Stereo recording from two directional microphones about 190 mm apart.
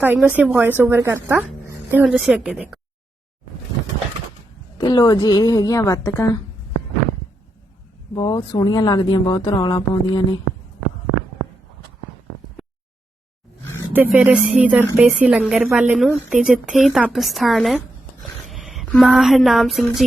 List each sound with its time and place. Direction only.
0.0 s a woman's voice: 10° right (ahead or behind)
4.8 s speech: 20° left (ahead or behind)
8.1 s speech: 25° left (ahead or behind)
13.9 s a woman's voice: 10° right (ahead or behind)